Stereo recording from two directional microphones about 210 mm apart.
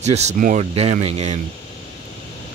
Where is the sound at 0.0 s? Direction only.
30° right (ahead or behind).